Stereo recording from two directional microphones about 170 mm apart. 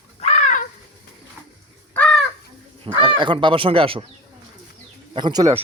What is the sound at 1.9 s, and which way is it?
Bird, 10° left (ahead or behind).